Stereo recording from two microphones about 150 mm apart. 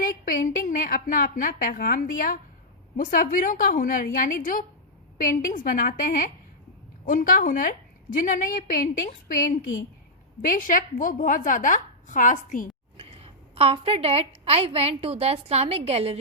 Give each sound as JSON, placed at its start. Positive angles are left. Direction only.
{"t": 0.0, "sound": "a woman's voice", "side_deg": 65}
{"t": 13.0, "sound": "a woman's voice", "side_deg": -40}